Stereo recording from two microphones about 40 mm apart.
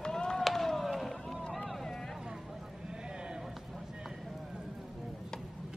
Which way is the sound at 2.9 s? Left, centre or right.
Right.